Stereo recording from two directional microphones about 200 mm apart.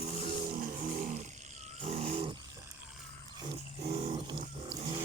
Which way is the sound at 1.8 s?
30° right (ahead or behind).